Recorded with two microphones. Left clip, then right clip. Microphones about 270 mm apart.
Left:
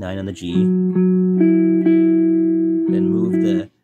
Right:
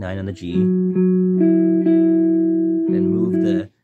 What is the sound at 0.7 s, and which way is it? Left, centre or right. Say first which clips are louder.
Music: right 1 dB; left.